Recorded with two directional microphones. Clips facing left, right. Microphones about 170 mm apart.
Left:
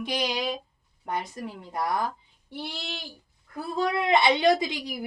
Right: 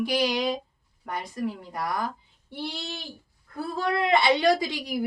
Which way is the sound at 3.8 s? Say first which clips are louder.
Even; 20° left (ahead or behind).